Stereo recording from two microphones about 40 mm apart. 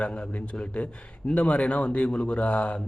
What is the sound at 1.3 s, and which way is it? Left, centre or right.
Speech, left.